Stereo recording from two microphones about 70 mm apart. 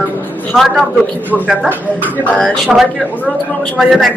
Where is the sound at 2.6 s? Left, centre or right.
Centre.